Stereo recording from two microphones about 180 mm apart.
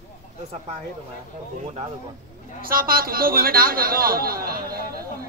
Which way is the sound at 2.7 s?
55° right (ahead or behind).